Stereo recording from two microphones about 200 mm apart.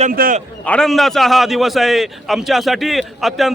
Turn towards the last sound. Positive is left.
turn(degrees=0)  # may be behind; listen again after turning